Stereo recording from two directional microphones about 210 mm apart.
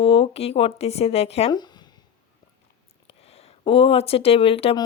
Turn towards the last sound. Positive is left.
turn(degrees=25)  # may be behind; listen again after turning